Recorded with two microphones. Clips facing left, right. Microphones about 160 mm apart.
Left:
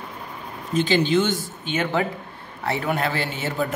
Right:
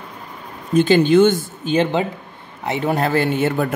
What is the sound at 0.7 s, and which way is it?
A man's voice, 50° right (ahead or behind).